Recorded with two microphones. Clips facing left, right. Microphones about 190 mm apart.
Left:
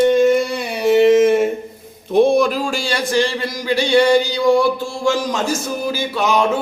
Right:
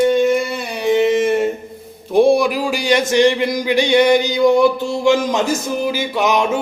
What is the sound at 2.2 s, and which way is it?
A man's voice, 10° right (ahead or behind).